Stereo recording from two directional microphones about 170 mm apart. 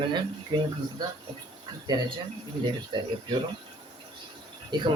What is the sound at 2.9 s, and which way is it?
Speech, 25° right (ahead or behind).